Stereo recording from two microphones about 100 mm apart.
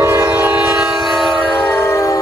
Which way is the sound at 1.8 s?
30° left (ahead or behind).